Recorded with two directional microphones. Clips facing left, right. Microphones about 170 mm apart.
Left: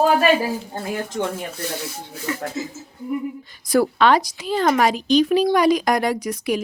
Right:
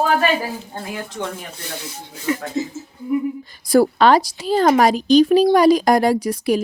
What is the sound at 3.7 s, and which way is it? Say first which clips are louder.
Speech: right 3 dB; 35° right (ahead or behind).